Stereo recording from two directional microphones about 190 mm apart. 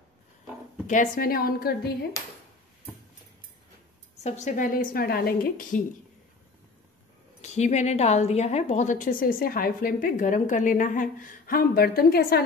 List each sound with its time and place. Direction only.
0.8 s a woman's voice: 45° left (ahead or behind)
4.2 s a woman's voice: 40° left (ahead or behind)
7.4 s a woman's voice: 35° left (ahead or behind); by 12.4 s 55° left (ahead or behind)